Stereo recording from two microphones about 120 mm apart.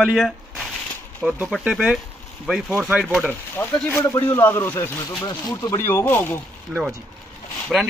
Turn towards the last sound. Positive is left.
turn(degrees=-10)  # may be behind; listen again after turning